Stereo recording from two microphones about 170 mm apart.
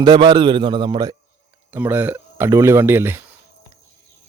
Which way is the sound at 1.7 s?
10° right (ahead or behind).